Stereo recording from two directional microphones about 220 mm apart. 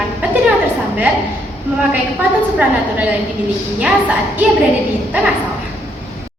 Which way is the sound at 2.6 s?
5° right (ahead or behind).